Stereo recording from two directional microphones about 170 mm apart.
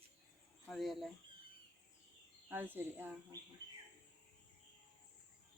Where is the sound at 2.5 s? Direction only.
10° right (ahead or behind).